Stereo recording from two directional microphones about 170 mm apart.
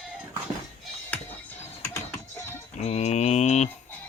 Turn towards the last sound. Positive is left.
turn(degrees=40)  # may be behind; listen again after turning